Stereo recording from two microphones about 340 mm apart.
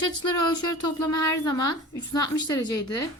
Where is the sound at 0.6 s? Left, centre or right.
Left.